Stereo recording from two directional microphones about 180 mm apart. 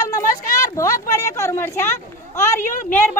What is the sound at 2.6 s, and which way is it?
Speech, 45° left (ahead or behind).